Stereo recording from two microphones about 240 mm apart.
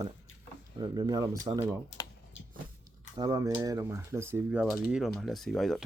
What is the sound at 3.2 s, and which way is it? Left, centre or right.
Speech, centre.